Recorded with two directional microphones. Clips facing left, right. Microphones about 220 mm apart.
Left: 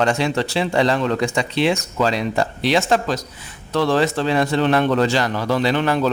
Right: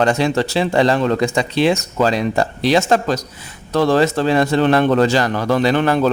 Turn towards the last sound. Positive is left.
turn(degrees=-50)  # may be behind; listen again after turning